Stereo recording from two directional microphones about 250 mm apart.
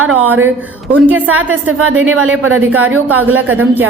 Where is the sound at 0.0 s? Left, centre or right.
Right.